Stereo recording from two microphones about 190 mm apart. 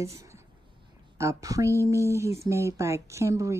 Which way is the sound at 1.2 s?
15° right (ahead or behind).